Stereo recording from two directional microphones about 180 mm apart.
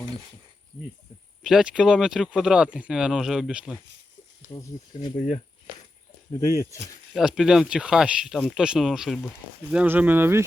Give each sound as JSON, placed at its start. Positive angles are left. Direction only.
{"t": 1.5, "sound": "speech", "side_deg": -5}
{"t": 4.4, "sound": "speech", "side_deg": 20}
{"t": 5.2, "sound": "speech", "side_deg": 35}
{"t": 6.3, "sound": "speech", "side_deg": 15}
{"t": 7.1, "sound": "speech", "side_deg": 0}